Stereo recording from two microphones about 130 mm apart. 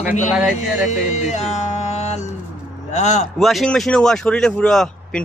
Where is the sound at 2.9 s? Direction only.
60° left (ahead or behind).